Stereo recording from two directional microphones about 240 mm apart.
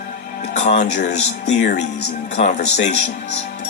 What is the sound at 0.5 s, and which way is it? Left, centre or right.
Speech, left.